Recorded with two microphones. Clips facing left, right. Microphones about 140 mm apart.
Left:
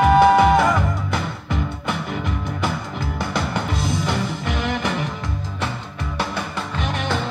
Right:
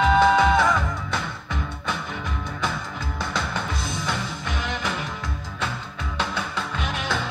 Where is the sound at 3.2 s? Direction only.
15° left (ahead or behind).